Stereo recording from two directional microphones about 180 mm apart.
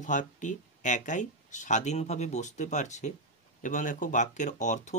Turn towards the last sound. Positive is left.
turn(degrees=40)  # may be behind; listen again after turning